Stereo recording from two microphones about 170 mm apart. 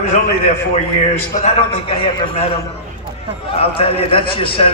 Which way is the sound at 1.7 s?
30° left (ahead or behind).